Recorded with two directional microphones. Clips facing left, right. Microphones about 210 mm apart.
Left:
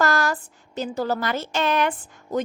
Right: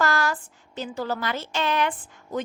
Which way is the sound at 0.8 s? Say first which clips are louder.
Left 4 dB; 40° left (ahead or behind).